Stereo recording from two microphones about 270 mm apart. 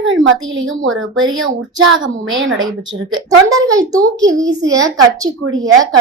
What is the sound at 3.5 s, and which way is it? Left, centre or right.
A woman's voice, centre.